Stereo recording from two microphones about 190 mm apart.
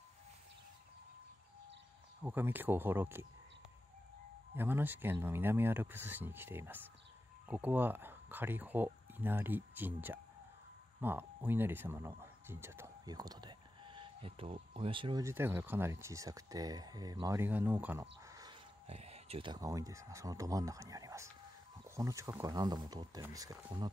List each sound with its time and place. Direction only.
2.2 s speech: 10° right (ahead or behind)
4.6 s speech: 10° right (ahead or behind); by 15.2 s 25° right (ahead or behind)
15.2 s speech: 10° right (ahead or behind)
18.2 s chicken: 20° right (ahead or behind)
18.9 s speech: 35° right (ahead or behind)